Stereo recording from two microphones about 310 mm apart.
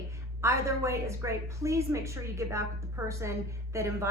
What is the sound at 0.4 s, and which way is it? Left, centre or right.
A woman's voice, centre.